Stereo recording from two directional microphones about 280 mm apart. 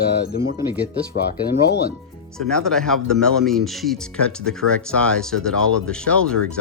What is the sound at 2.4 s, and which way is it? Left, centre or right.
Speech, centre.